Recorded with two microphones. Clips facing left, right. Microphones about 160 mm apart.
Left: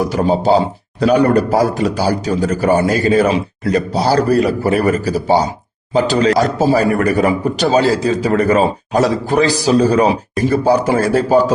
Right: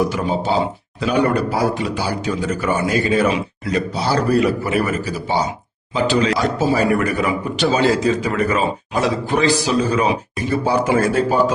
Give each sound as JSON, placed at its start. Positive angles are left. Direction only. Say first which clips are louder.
{"t": 0.1, "sound": "speech", "louder": "left 7 dB", "side_deg": 35}